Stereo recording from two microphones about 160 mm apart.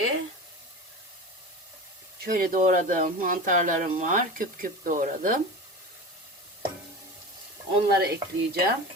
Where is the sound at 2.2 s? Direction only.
60° right (ahead or behind).